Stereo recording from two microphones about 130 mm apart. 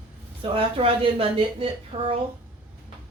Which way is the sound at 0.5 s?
45° right (ahead or behind).